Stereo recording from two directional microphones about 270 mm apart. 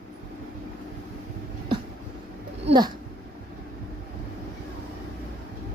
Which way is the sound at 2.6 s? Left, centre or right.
Centre.